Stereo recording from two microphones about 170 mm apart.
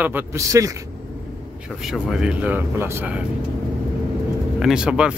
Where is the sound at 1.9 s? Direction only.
5° right (ahead or behind).